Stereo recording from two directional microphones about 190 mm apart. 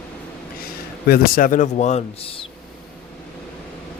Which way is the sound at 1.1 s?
45° left (ahead or behind).